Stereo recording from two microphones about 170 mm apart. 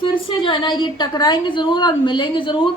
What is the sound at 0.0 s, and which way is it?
A woman's voice, 30° left (ahead or behind).